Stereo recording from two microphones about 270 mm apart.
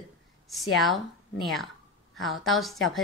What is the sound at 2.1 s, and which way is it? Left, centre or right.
Speech, centre.